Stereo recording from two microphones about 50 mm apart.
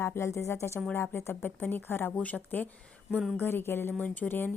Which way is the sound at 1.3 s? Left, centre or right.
Left.